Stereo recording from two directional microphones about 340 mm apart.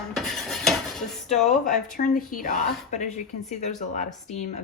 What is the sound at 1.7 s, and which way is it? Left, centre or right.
A woman's voice, left.